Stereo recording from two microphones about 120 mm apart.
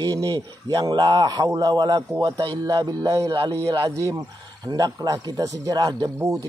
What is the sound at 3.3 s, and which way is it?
Speech, 45° right (ahead or behind).